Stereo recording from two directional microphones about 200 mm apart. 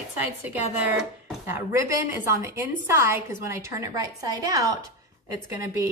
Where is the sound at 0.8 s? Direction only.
10° right (ahead or behind).